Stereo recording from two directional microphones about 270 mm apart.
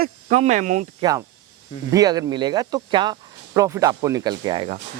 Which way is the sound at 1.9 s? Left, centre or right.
Centre.